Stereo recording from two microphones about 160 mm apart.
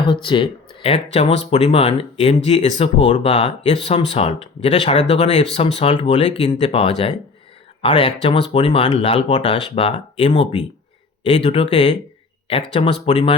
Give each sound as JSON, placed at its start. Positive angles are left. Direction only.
{"t": 0.0, "sound": "speech", "side_deg": 30}
{"t": 6.1, "sound": "speech", "side_deg": 35}